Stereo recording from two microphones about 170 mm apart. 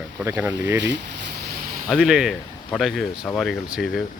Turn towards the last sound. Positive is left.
turn(degrees=0)  # may be behind; listen again after turning